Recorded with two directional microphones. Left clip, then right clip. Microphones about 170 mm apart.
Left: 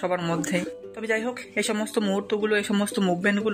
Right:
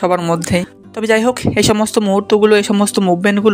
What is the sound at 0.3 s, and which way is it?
Speech, 40° right (ahead or behind).